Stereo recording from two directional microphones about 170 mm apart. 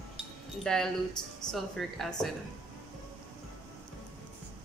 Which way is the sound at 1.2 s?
25° left (ahead or behind).